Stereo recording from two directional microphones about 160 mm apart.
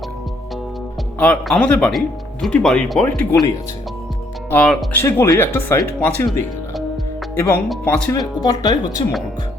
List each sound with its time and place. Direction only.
1.2 s speech: 5° left (ahead or behind)
4.5 s speech: 5° left (ahead or behind)
4.9 s speech: 15° left (ahead or behind)
7.3 s speech: 15° left (ahead or behind)
8.4 s speech: 25° left (ahead or behind)